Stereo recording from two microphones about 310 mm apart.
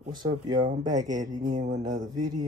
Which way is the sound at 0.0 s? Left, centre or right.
Centre.